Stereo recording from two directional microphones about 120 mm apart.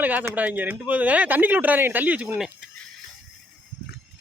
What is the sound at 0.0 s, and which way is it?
Speech, 15° right (ahead or behind).